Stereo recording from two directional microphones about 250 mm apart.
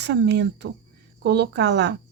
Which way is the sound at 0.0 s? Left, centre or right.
Right.